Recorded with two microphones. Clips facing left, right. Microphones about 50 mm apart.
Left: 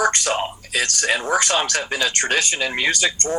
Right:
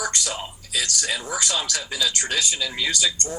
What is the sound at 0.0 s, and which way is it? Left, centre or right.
Speech, left.